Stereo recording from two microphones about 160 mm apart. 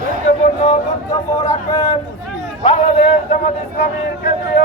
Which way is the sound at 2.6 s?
30° left (ahead or behind).